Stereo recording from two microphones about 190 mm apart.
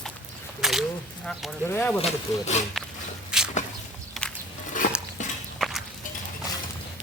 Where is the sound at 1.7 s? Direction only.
10° left (ahead or behind).